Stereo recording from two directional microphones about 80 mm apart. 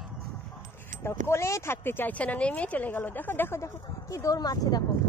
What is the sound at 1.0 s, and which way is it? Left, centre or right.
Speech, left.